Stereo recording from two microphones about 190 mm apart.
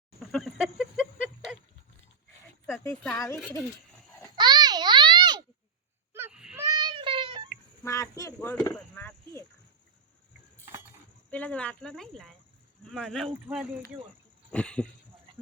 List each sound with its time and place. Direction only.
0.2 s a sound: centre (ahead or behind)
2.7 s a child's voice: 5° left (ahead or behind)
4.4 s babbling: 20° right (ahead or behind)
6.1 s wail: 10° right (ahead or behind)
6.6 s child singing: 20° right (ahead or behind)
7.9 s speech: 15° left (ahead or behind)
11.3 s speech: 5° left (ahead or behind)